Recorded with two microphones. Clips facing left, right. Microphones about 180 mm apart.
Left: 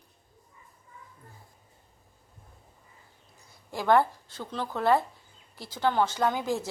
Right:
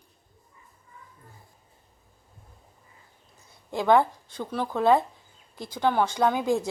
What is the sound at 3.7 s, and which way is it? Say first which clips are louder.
Speech: right 2 dB; 20° right (ahead or behind).